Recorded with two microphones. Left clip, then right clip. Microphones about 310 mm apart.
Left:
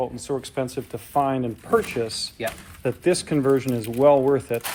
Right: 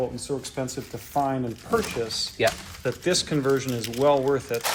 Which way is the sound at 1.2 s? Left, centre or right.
Left.